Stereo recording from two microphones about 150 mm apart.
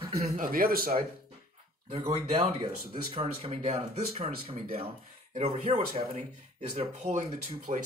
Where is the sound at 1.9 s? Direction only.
40° right (ahead or behind).